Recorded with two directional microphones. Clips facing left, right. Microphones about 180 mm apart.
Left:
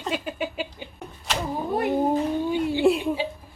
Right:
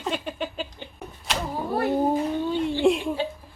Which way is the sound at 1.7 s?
20° left (ahead or behind).